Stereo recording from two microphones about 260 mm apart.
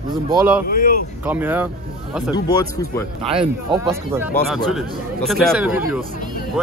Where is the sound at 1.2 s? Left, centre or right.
Centre.